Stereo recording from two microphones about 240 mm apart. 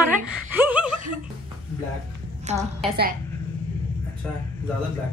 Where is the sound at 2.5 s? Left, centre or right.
Right.